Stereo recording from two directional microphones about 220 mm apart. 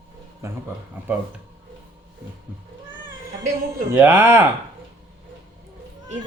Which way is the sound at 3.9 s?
10° right (ahead or behind).